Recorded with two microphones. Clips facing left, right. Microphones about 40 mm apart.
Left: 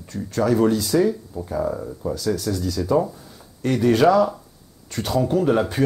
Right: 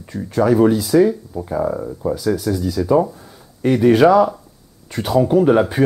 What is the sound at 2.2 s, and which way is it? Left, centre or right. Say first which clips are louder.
Speech: right 3 dB; centre.